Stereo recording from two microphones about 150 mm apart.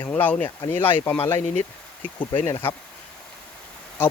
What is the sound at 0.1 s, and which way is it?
Speech, 10° left (ahead or behind).